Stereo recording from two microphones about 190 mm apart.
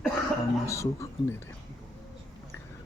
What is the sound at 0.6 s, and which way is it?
Speech, 15° left (ahead or behind).